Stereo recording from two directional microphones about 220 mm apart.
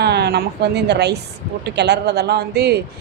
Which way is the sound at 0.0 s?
50° right (ahead or behind).